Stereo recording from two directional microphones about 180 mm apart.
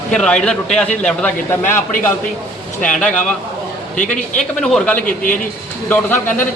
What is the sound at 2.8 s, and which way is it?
Speech, 5° left (ahead or behind).